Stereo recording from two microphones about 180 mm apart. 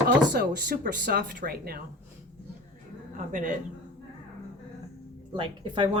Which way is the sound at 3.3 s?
45° right (ahead or behind).